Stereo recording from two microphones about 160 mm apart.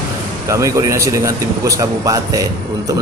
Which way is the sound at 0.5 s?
20° right (ahead or behind).